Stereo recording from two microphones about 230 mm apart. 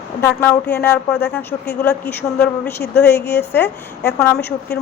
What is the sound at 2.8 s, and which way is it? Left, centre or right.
Speech, left.